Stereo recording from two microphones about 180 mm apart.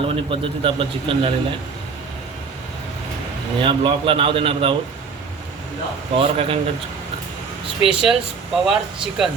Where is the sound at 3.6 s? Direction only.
30° right (ahead or behind).